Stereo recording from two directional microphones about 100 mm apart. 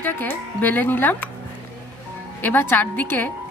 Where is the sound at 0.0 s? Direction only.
20° left (ahead or behind).